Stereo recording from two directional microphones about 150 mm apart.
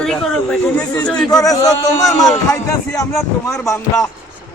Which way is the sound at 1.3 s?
25° left (ahead or behind).